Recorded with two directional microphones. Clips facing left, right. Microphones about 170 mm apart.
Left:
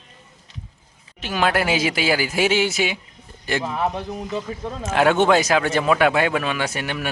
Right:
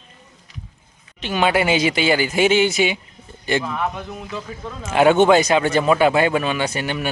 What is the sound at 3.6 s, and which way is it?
Speech, 30° left (ahead or behind).